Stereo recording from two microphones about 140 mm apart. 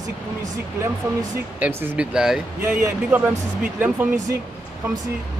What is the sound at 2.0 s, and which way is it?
Speech, 5° right (ahead or behind).